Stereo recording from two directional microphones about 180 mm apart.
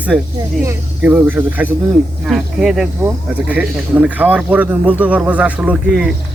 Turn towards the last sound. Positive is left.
turn(degrees=-5)  # may be behind; listen again after turning